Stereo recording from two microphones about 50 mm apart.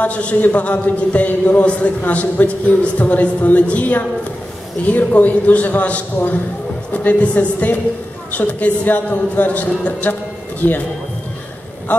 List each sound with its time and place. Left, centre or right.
0.0 s a man's voice: left